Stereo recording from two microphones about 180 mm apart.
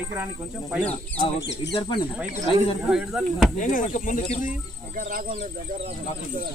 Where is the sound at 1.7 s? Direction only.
25° left (ahead or behind).